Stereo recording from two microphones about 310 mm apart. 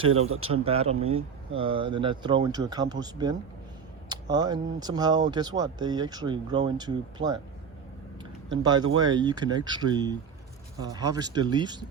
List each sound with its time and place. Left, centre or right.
0.3 s a man's voice: right
0.5 s speech: centre
8.6 s speech: centre